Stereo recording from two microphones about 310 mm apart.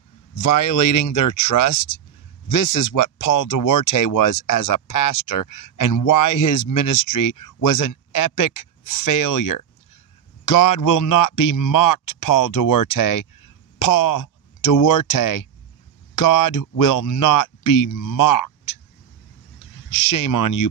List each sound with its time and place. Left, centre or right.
0.4 s speech: left
19.9 s speech: left